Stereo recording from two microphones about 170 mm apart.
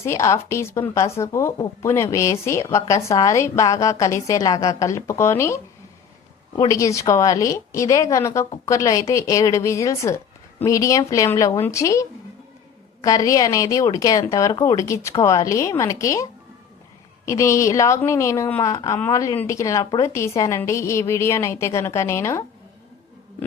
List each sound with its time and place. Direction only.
0.0 s a woman's voice: 15° left (ahead or behind)
6.6 s a woman's voice: 20° left (ahead or behind)
17.2 s a woman's voice: 15° left (ahead or behind)